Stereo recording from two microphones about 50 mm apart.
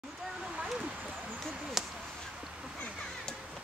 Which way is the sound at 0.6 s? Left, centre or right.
Centre.